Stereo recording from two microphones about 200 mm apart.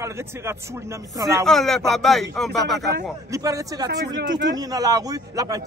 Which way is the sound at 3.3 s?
15° right (ahead or behind).